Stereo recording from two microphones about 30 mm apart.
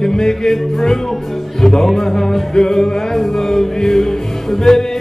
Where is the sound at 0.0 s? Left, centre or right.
Centre.